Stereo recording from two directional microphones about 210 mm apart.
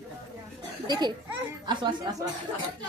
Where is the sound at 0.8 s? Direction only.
20° right (ahead or behind).